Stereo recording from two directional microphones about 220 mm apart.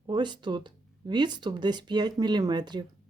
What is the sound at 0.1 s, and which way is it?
Speech, 20° right (ahead or behind).